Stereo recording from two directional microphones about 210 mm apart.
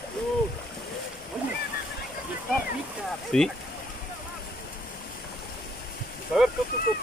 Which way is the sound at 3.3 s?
5° left (ahead or behind).